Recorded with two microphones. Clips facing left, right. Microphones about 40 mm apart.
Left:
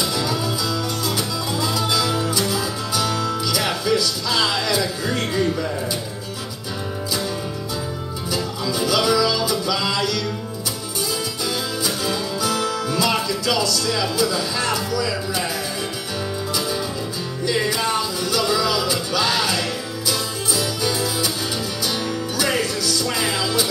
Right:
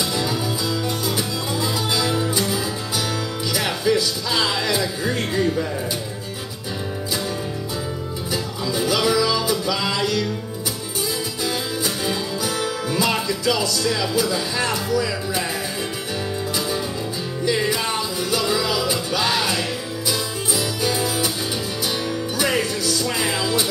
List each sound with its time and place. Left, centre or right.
0.0 s music: centre
3.8 s music: right
8.3 s music: right
11.4 s music: centre
17.5 s music: centre
22.6 s music: right